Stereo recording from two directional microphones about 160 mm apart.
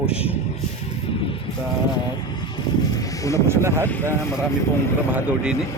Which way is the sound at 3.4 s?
15° right (ahead or behind).